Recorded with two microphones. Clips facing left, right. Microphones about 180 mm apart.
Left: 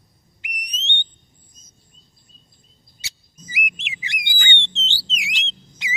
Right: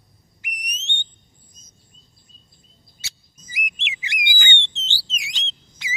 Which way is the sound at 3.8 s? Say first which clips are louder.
Right 1 dB; centre (ahead or behind).